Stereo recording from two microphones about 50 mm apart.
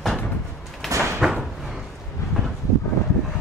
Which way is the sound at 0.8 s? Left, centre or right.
Centre.